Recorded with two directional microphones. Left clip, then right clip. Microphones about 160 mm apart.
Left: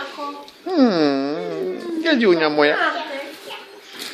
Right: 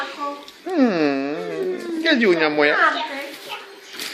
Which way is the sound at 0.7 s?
15° left (ahead or behind).